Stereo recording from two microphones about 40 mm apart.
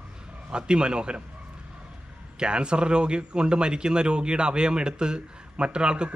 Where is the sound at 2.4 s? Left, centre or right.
Right.